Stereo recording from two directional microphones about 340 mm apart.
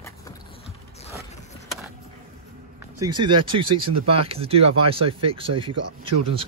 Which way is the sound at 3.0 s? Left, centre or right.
Centre.